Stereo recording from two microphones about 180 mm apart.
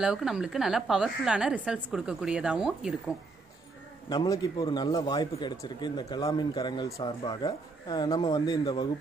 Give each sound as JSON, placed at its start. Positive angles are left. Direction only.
{"t": 0.0, "sound": "a woman's voice", "side_deg": -5}
{"t": 4.1, "sound": "speech", "side_deg": 25}